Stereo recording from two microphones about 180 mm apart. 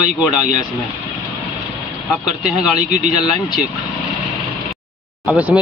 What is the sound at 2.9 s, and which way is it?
Speech, 40° right (ahead or behind).